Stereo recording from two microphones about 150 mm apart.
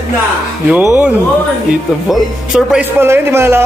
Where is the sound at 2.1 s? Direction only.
5° right (ahead or behind).